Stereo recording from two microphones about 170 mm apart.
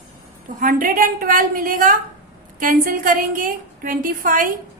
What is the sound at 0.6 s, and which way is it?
A woman's voice, 55° right (ahead or behind).